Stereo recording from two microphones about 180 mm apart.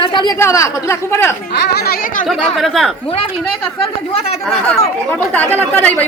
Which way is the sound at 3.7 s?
35° left (ahead or behind).